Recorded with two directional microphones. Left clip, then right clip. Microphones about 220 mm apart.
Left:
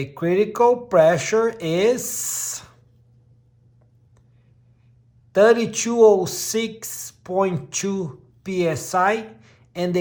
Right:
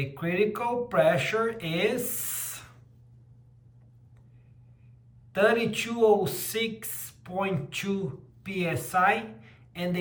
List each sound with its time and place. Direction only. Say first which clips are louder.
0.1 s speech: left 7 dB; 20° left (ahead or behind)
5.3 s speech: left 8 dB; 20° left (ahead or behind)